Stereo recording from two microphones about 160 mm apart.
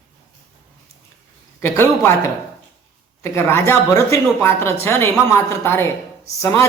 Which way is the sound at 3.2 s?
15° left (ahead or behind).